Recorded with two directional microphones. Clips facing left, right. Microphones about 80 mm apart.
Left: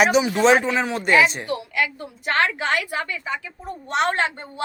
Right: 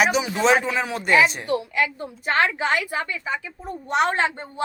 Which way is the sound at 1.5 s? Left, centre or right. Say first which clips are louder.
Right 2 dB; right.